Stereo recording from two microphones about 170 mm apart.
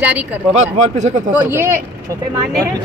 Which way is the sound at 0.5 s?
45° right (ahead or behind).